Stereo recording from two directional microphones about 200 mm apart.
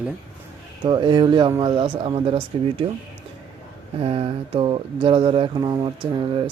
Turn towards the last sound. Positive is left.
turn(degrees=-25)  # may be behind; listen again after turning